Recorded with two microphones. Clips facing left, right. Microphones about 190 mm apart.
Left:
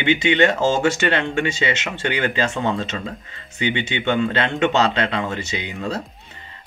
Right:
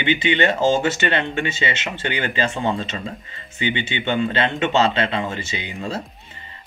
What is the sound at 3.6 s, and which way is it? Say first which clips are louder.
Speech: left 2 dB; 5° right (ahead or behind).